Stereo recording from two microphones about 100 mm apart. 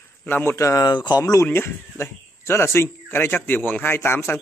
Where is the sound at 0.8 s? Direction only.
45° left (ahead or behind).